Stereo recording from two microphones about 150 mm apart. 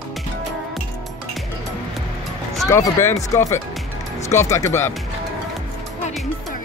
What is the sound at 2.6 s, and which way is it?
Speech, 20° left (ahead or behind).